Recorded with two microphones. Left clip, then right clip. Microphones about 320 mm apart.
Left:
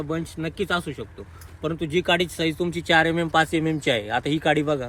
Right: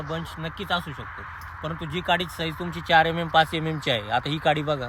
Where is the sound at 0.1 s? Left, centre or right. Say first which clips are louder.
Left 3 dB; right.